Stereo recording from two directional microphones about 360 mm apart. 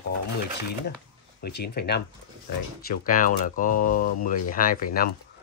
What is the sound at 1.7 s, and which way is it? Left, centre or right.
Speech, left.